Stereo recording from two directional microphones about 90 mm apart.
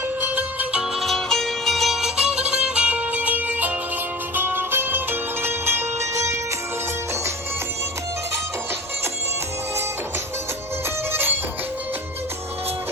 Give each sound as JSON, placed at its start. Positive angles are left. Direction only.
{"t": 0.2, "sound": "music", "side_deg": -20}
{"t": 0.9, "sound": "music", "side_deg": 0}
{"t": 11.1, "sound": "music", "side_deg": -25}